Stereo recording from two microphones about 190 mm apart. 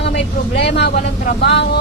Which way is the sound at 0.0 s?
65° left (ahead or behind).